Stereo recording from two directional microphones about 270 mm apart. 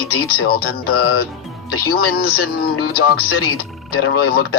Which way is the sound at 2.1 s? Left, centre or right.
Left.